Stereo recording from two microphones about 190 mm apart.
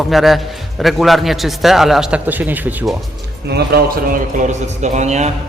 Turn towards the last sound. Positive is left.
turn(degrees=-35)  # may be behind; listen again after turning